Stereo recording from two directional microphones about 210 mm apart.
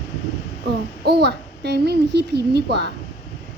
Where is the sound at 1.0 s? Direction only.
50° right (ahead or behind).